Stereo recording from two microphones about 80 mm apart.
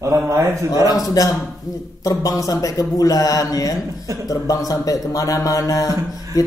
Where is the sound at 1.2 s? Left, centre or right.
Left.